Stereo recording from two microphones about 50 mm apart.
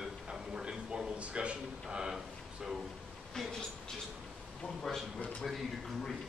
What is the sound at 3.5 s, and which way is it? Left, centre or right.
Speech, centre.